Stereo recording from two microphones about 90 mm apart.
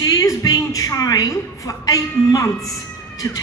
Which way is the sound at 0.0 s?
40° left (ahead or behind).